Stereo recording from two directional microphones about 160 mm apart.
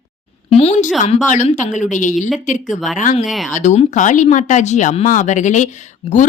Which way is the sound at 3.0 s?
55° left (ahead or behind).